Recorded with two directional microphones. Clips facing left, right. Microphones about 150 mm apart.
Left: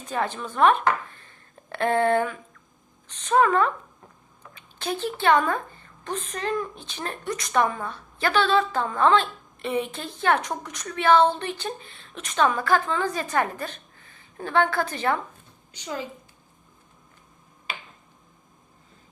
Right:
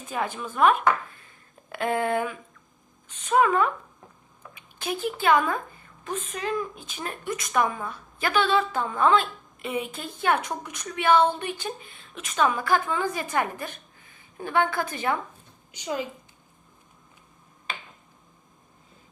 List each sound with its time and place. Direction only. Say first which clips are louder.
0.0 s a woman's voice: left 2 dB; 10° right (ahead or behind)
12.5 s a woman's voice: left 2 dB; 15° right (ahead or behind)